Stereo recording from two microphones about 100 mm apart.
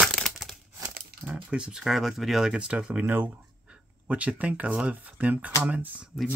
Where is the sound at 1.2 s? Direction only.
10° right (ahead or behind).